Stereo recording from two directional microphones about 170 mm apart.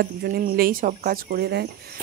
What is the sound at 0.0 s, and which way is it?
Speech, 65° right (ahead or behind).